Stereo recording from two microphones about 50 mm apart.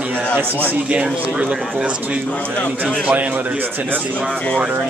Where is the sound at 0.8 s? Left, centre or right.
Right.